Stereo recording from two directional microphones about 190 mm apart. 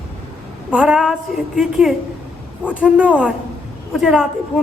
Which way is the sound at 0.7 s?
5° right (ahead or behind).